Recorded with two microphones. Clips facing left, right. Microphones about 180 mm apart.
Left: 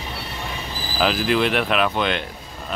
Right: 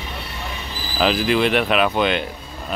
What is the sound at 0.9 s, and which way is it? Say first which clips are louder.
Speech: right 2 dB; centre (ahead or behind).